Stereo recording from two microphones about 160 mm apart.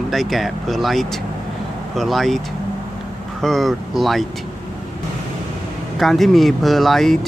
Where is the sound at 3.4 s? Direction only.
Centre (ahead or behind).